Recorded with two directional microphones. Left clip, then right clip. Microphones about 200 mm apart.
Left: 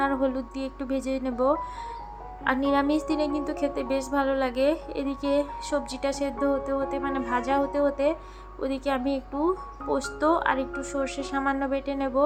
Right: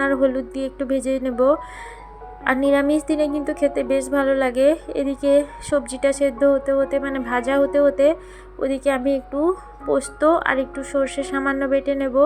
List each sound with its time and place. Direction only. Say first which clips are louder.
0.0 s a woman's voice: right 7 dB; 15° right (ahead or behind)